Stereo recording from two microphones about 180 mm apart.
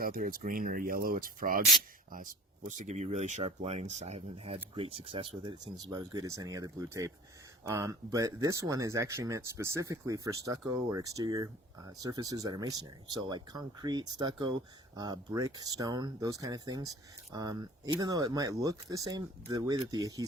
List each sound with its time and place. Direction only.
0.0 s speech: 50° right (ahead or behind); by 20.2 s 20° right (ahead or behind)